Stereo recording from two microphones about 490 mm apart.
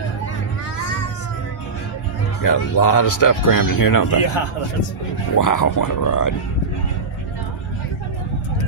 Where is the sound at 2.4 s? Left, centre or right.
Left.